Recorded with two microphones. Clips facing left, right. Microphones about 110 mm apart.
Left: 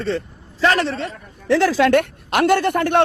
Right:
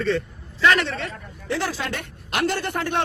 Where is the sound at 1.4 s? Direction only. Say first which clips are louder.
Left 11 dB; 85° left; by 3.0 s 60° left (ahead or behind).